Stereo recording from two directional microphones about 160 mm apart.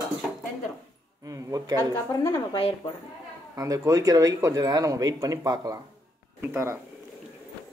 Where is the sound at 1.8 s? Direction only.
20° left (ahead or behind).